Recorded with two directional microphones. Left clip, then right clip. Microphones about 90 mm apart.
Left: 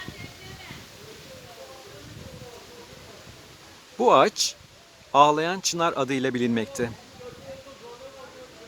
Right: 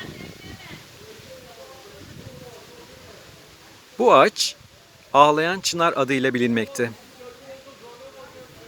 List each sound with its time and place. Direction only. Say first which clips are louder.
3.9 s speech: right 3 dB; 20° right (ahead or behind)